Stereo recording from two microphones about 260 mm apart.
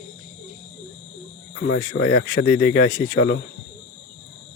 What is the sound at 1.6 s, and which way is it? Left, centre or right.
Speech, left.